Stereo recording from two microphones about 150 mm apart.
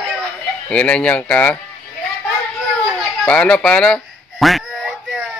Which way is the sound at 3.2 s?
5° left (ahead or behind).